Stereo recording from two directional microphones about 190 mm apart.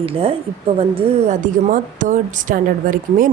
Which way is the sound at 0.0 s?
30° right (ahead or behind).